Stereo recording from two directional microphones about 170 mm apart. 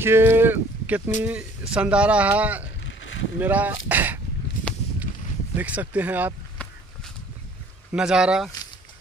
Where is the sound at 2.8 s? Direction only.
90° left.